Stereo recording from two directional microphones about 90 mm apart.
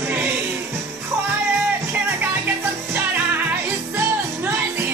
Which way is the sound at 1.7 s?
20° right (ahead or behind).